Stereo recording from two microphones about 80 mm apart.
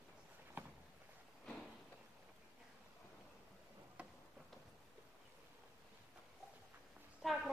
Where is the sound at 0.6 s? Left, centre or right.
Right.